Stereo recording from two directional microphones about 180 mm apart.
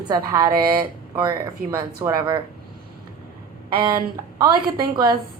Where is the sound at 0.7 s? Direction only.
20° right (ahead or behind).